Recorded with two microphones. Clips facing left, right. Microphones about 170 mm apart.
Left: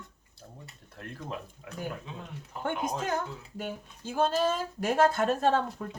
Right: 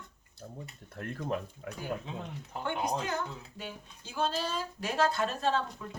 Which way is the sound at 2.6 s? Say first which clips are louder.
Left 2 dB; 50° left (ahead or behind).